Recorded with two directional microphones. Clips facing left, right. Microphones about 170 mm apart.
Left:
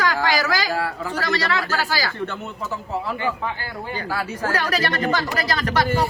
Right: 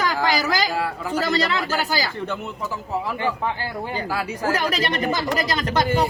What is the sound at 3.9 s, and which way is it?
Speech, 15° right (ahead or behind).